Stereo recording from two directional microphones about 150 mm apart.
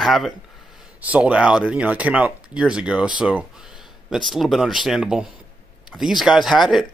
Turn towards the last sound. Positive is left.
turn(degrees=0)  # may be behind; listen again after turning